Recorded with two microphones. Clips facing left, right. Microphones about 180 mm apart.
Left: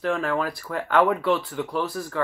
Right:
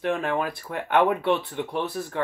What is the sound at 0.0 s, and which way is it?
Speech, 20° right (ahead or behind).